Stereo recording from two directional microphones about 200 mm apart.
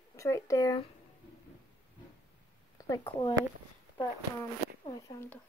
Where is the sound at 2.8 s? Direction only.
15° left (ahead or behind).